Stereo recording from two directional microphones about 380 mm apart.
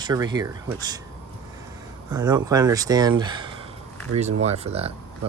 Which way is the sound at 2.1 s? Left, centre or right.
Centre.